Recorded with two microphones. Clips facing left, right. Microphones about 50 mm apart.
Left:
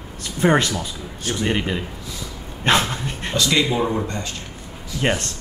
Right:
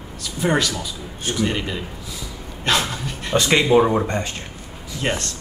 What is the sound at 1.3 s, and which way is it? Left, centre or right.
Speech, centre.